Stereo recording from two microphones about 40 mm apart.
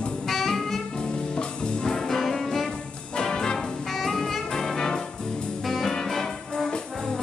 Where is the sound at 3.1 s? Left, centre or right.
Centre.